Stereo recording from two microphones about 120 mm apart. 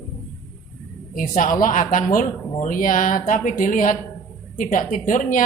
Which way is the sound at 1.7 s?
90° left.